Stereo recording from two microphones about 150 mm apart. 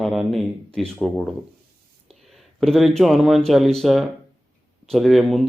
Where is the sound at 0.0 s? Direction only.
Centre (ahead or behind).